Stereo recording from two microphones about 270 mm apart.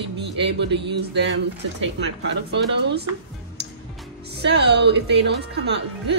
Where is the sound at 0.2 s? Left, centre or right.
Right.